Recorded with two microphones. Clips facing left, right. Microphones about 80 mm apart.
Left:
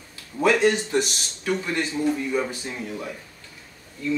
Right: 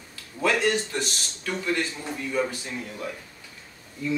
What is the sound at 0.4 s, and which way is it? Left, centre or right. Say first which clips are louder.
Speech: left 4 dB; centre.